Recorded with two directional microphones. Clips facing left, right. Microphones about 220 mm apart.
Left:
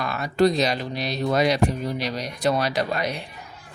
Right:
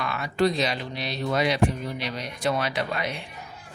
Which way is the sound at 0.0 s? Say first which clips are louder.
Left 4 dB; 40° left (ahead or behind).